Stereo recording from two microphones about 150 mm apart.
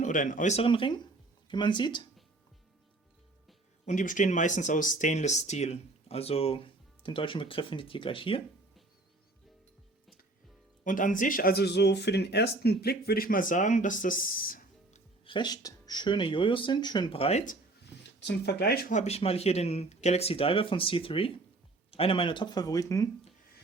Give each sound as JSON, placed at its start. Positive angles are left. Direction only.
{"t": 0.0, "sound": "speech", "side_deg": 60}
{"t": 3.8, "sound": "speech", "side_deg": 60}
{"t": 10.8, "sound": "speech", "side_deg": 60}
{"t": 15.2, "sound": "speech", "side_deg": 30}
{"t": 18.4, "sound": "speech", "side_deg": 90}
{"t": 18.9, "sound": "speech", "side_deg": 45}